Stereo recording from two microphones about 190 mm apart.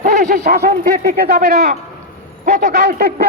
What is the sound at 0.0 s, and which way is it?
A man's voice, 50° right (ahead or behind).